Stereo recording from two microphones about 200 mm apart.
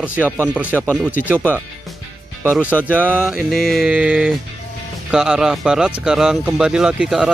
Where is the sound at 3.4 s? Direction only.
Centre (ahead or behind).